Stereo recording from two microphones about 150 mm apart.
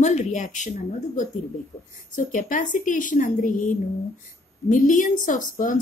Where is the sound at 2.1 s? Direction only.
60° left (ahead or behind).